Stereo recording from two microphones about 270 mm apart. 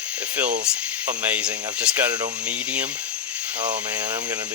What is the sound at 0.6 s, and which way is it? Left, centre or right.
Speech, centre.